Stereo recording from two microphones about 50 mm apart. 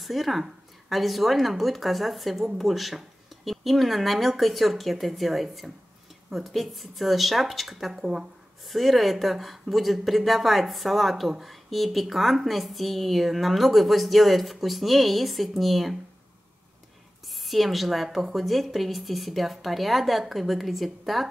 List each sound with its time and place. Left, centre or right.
0.0 s a woman's voice: centre
17.3 s a woman's voice: centre